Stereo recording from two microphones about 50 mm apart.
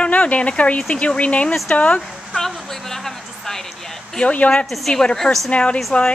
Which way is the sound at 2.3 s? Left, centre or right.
Centre.